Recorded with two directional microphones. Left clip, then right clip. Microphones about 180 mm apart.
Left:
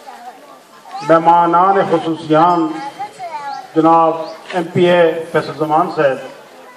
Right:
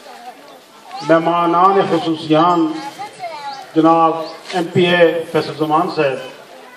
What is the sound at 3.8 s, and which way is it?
A man's voice, centre (ahead or behind).